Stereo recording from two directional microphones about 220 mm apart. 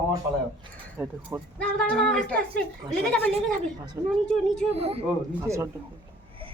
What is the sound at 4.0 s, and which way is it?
Speech, 10° right (ahead or behind).